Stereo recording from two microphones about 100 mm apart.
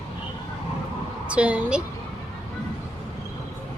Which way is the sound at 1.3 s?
15° right (ahead or behind).